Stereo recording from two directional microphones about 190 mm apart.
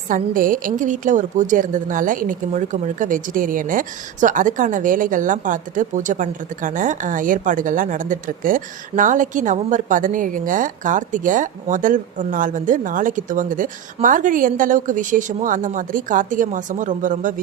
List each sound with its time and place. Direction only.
0.1 s a woman's voice: 45° right (ahead or behind)